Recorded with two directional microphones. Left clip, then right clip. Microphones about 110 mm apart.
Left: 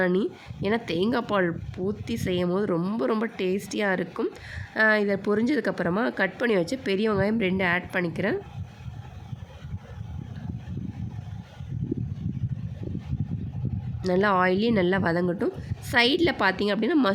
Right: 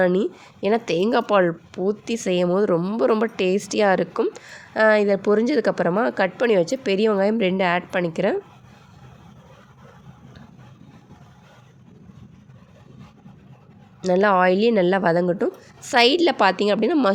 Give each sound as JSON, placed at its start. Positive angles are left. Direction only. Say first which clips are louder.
{"t": 0.0, "sound": "speech", "louder": "right 5 dB", "side_deg": -30}
{"t": 2.7, "sound": "speech", "louder": "right 6 dB", "side_deg": -10}
{"t": 3.0, "sound": "a woman's voice", "louder": "right 9 dB", "side_deg": -30}
{"t": 14.0, "sound": "speech", "louder": "right 5 dB", "side_deg": -25}